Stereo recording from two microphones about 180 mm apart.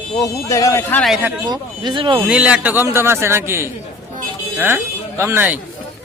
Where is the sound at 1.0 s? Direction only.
5° right (ahead or behind).